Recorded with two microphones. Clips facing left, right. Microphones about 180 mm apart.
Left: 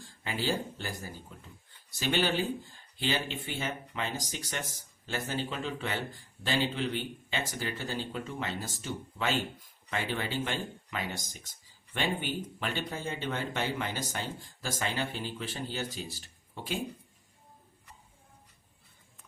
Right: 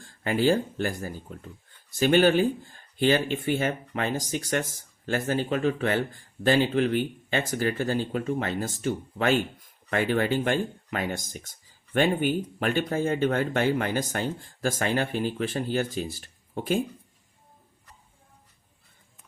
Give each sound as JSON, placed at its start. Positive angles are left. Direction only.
{"t": 0.0, "sound": "speech", "side_deg": -55}